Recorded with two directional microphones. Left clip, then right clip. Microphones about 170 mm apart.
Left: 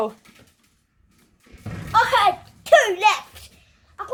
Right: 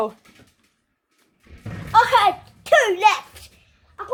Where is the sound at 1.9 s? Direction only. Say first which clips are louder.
Right 2 dB; 45° right (ahead or behind).